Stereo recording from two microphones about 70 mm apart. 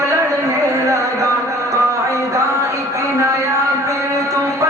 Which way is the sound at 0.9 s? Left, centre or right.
Right.